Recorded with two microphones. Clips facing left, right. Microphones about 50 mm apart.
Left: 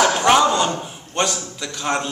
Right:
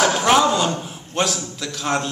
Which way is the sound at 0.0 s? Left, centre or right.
Centre.